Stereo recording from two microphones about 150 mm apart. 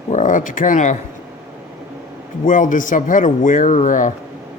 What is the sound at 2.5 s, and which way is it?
Speech, 60° left (ahead or behind).